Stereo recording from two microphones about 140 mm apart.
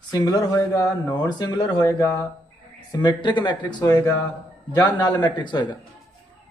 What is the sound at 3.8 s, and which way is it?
Speech, 20° left (ahead or behind).